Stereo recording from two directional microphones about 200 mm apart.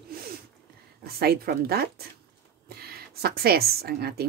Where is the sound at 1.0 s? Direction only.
50° right (ahead or behind).